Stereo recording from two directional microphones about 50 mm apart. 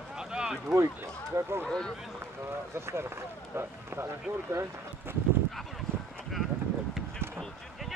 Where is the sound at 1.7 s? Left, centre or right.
Centre.